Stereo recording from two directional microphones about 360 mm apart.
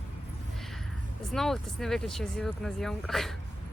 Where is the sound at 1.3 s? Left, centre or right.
Centre.